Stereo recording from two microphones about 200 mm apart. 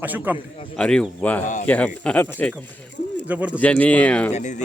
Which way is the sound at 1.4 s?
40° left (ahead or behind).